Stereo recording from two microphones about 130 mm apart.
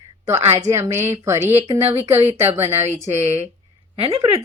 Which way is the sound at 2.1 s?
55° right (ahead or behind).